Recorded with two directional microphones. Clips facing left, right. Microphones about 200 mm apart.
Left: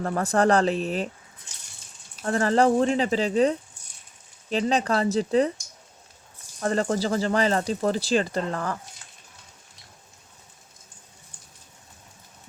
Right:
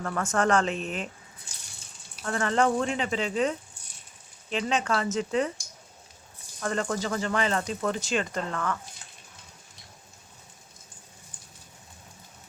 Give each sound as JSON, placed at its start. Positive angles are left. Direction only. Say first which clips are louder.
{"t": 0.0, "sound": "speech", "louder": "left 4 dB", "side_deg": 35}
{"t": 2.2, "sound": "speech", "louder": "left 5 dB", "side_deg": 35}
{"t": 6.6, "sound": "speech", "louder": "left 5 dB", "side_deg": 35}